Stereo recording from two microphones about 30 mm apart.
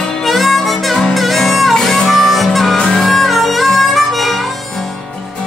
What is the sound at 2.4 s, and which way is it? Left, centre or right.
Harmonica, centre.